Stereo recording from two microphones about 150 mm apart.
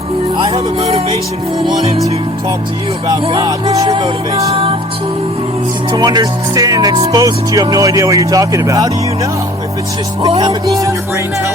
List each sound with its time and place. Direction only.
0.3 s music: 45° right (ahead or behind)
3.1 s music: 35° right (ahead or behind)
6.0 s speech: 25° right (ahead or behind)